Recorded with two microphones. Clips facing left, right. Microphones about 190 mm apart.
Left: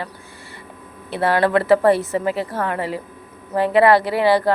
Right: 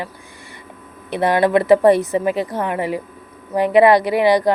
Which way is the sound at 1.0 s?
15° right (ahead or behind).